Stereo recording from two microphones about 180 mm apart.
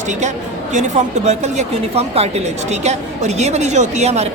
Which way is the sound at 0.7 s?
40° right (ahead or behind).